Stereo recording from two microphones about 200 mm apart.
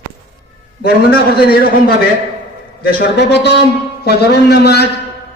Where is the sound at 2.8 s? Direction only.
50° left (ahead or behind).